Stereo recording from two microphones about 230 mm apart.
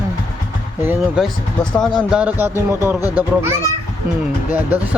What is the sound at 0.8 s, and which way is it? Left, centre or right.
Speech, centre.